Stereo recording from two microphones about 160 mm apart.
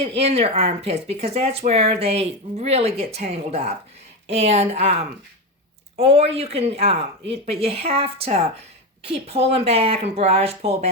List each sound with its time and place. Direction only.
0.0 s speech: 35° right (ahead or behind)
6.0 s speech: 40° right (ahead or behind)